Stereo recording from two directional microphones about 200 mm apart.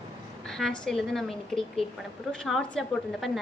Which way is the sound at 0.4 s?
Centre (ahead or behind).